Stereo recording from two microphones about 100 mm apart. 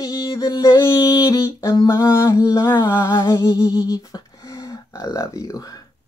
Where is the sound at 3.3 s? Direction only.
45° left (ahead or behind).